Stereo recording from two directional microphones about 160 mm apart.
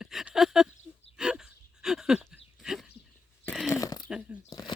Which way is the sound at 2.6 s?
5° right (ahead or behind).